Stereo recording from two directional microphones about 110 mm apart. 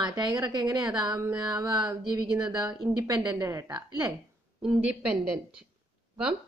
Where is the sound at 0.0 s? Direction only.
35° right (ahead or behind).